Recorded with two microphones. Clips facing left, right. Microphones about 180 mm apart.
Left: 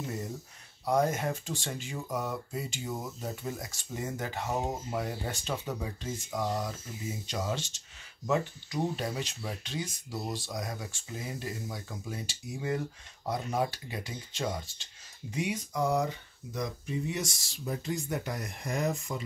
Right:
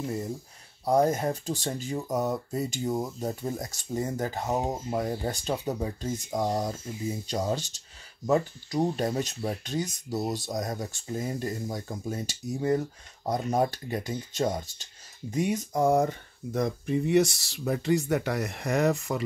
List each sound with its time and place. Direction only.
0.0 s speech: 30° right (ahead or behind); by 19.2 s 70° right (ahead or behind)